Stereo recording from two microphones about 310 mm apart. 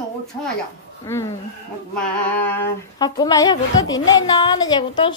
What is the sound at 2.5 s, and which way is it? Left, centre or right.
A child's voice, centre.